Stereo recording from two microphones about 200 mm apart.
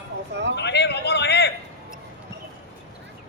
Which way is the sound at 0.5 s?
60° left (ahead or behind).